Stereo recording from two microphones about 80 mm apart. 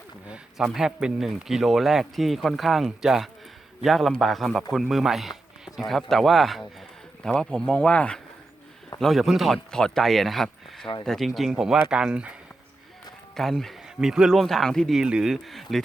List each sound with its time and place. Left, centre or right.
0.3 s speech: centre
9.0 s speech: centre
13.3 s speech: centre
15.0 s speech: centre